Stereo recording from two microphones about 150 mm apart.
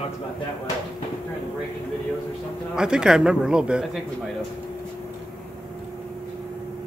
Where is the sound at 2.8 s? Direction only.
5° right (ahead or behind).